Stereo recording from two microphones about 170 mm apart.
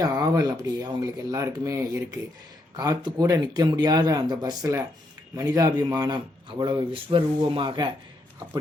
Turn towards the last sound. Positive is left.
turn(degrees=-30)  # may be behind; listen again after turning